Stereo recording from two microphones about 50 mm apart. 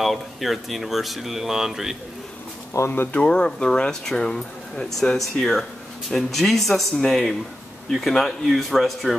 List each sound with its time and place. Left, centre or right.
0.0 s speech: centre
2.8 s speech: left
3.1 s speech: left; by 9.1 s centre